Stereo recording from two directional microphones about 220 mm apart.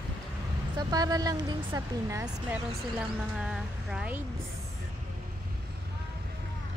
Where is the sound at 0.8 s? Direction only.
15° right (ahead or behind).